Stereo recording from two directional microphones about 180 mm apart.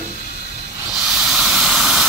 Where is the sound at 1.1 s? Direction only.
5° right (ahead or behind).